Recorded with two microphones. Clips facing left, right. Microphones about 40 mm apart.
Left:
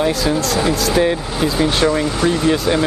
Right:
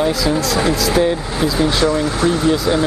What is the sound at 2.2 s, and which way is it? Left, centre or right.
Speech, centre.